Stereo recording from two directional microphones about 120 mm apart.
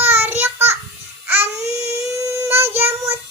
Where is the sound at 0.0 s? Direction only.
15° right (ahead or behind).